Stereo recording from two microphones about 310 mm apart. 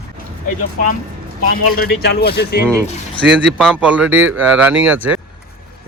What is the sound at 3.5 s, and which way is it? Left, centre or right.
Speech, centre.